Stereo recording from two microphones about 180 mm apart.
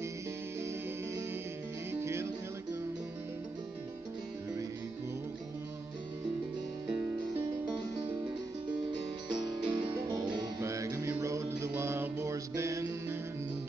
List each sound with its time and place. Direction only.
1.9 s music: 15° right (ahead or behind)
9.3 s music: 25° right (ahead or behind)